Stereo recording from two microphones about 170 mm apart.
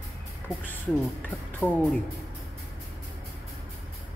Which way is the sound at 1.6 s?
10° left (ahead or behind).